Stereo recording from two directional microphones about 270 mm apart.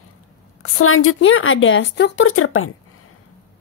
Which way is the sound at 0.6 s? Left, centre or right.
Left.